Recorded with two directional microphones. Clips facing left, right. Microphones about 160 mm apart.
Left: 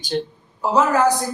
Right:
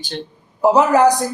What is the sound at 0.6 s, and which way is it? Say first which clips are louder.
Speech: right 5 dB; 15° right (ahead or behind).